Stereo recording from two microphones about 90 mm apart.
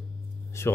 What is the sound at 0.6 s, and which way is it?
Speech, 30° left (ahead or behind).